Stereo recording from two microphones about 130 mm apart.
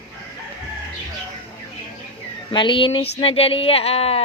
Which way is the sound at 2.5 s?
40° left (ahead or behind).